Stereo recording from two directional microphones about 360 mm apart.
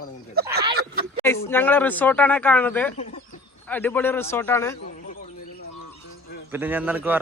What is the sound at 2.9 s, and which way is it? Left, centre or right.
Chicken, centre.